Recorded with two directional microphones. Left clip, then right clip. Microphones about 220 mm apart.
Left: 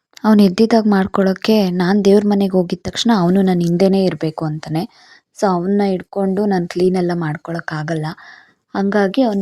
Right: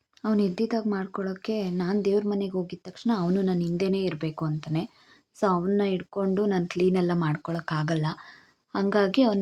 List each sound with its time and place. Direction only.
0.2 s a woman's voice: 40° left (ahead or behind)